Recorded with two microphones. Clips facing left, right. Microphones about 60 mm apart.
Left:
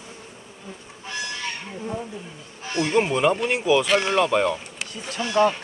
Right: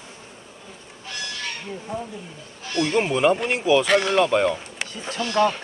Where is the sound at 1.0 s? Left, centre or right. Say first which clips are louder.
Left 2 dB; left.